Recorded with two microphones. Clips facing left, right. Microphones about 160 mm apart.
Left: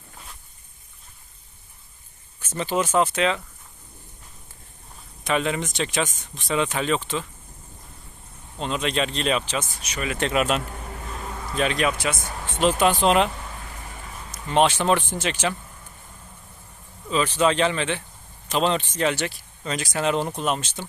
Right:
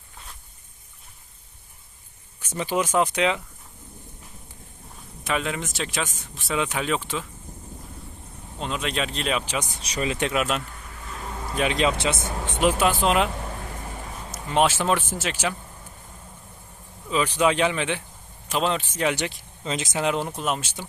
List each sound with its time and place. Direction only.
2.4 s speech: 10° right (ahead or behind)
5.2 s speech: centre (ahead or behind)
8.5 s speech: 5° right (ahead or behind)
9.6 s speech: 20° right (ahead or behind)
9.8 s speech: 30° right (ahead or behind)
10.3 s speech: centre (ahead or behind)
11.4 s speech: 15° right (ahead or behind)
17.1 s speech: 10° right (ahead or behind)
20.1 s speech: 5° right (ahead or behind)